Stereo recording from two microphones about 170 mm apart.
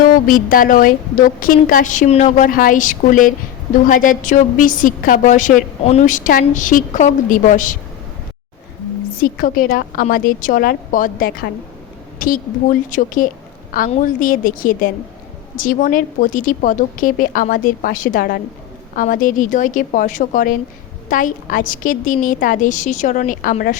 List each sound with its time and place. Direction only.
0.0 s a woman's voice: 55° left (ahead or behind)
9.2 s a woman's voice: 55° left (ahead or behind)
12.9 s a woman's voice: 50° left (ahead or behind)